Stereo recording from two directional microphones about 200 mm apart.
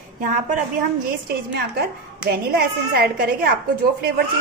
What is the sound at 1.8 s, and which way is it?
Speech, 50° right (ahead or behind).